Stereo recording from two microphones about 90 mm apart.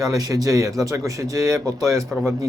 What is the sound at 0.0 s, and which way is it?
Speech, 40° right (ahead or behind).